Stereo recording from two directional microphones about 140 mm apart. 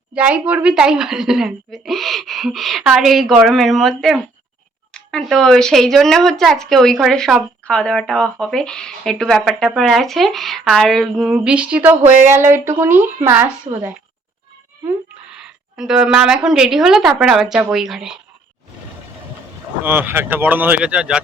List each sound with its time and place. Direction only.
0.1 s a woman's voice: 10° right (ahead or behind)
11.3 s speech: 10° right (ahead or behind)
13.7 s a woman's voice: 40° right (ahead or behind)
15.3 s a woman's voice: 5° right (ahead or behind)
19.8 s speech: 15° right (ahead or behind)